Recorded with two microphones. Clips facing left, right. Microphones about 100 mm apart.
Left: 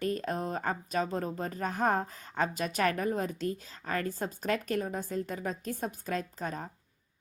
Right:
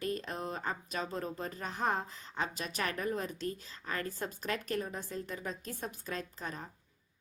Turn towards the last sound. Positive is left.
turn(degrees=45)  # may be behind; listen again after turning